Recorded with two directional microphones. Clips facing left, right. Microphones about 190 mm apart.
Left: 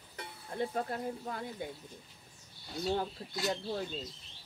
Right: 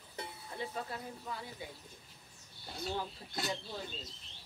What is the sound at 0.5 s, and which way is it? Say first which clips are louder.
Speech: left 7 dB; 50° left (ahead or behind).